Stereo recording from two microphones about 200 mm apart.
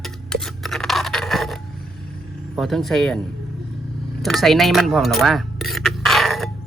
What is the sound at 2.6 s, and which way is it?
Speech, centre (ahead or behind).